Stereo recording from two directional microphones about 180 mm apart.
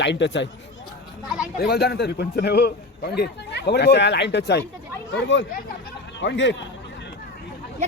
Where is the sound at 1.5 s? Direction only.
60° left (ahead or behind).